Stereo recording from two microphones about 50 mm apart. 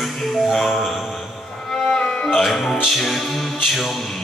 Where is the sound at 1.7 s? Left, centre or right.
Centre.